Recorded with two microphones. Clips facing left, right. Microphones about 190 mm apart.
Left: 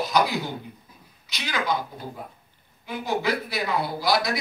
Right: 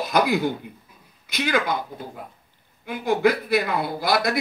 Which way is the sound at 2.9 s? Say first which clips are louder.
Right 5 dB; 55° right (ahead or behind).